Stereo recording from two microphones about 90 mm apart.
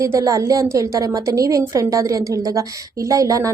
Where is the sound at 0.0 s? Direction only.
35° right (ahead or behind).